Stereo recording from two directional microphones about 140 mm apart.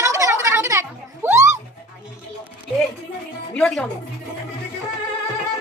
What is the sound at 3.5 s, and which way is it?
Speech, 5° left (ahead or behind).